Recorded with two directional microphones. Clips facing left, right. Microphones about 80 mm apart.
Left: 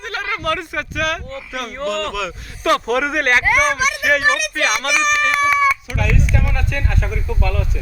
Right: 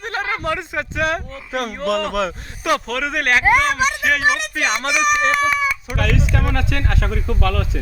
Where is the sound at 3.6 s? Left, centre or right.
Centre.